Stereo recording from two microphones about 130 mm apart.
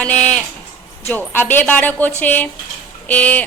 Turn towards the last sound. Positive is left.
turn(degrees=10)  # may be behind; listen again after turning